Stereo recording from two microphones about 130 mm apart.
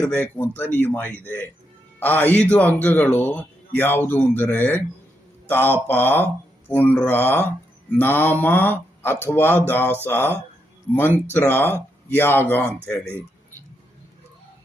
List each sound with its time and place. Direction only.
0.0 s a man's voice: 15° left (ahead or behind)